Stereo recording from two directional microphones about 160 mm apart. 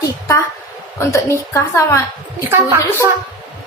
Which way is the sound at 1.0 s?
20° left (ahead or behind).